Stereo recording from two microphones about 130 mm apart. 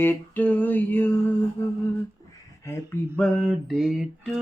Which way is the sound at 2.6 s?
20° left (ahead or behind).